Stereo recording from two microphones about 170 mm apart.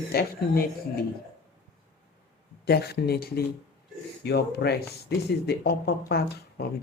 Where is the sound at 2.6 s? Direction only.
70° left (ahead or behind).